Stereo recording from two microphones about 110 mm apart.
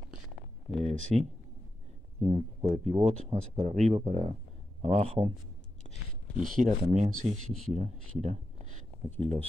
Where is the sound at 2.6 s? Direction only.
80° right.